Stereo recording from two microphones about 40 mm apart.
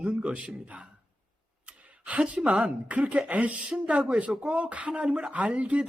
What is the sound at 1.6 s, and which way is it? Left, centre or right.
Sigh, right.